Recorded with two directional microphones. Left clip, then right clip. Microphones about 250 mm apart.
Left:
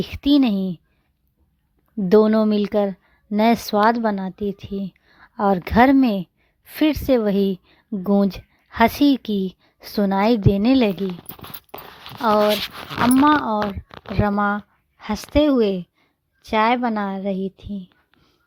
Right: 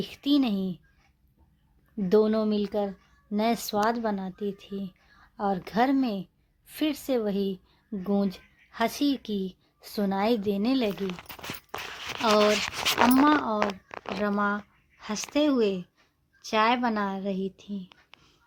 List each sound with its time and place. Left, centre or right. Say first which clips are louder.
0.0 s a woman's voice: left 8 dB; left
2.0 s a woman's voice: left 8 dB; left
12.2 s a woman's voice: left 5 dB; left